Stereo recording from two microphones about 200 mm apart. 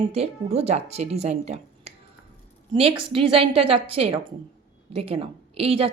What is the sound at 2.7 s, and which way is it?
A woman's voice, 25° right (ahead or behind).